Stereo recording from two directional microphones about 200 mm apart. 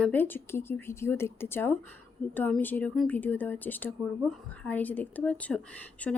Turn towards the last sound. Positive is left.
turn(degrees=5)  # may be behind; listen again after turning